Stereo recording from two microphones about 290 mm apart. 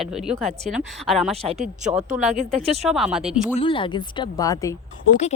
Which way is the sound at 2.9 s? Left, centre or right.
Centre.